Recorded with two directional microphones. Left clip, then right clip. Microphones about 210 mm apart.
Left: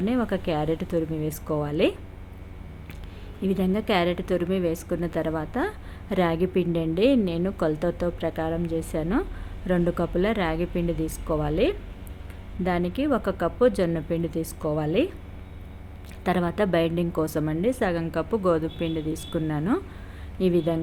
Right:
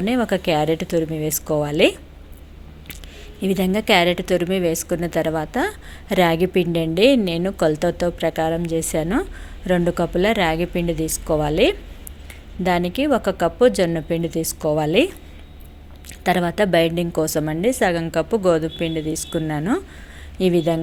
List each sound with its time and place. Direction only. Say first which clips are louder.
0.0 s a woman's voice: right 6 dB; 5° right (ahead or behind)
3.4 s a woman's voice: right 6 dB; 5° right (ahead or behind)
16.2 s a woman's voice: right 6 dB; centre (ahead or behind)